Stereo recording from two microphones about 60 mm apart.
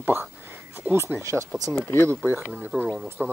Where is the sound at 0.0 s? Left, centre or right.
Right.